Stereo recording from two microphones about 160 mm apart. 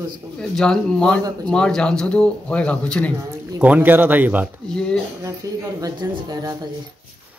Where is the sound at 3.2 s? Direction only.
15° right (ahead or behind).